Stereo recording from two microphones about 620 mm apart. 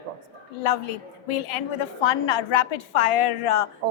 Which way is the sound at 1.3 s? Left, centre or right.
Left.